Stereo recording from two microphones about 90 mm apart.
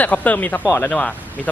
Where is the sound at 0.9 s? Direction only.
15° left (ahead or behind).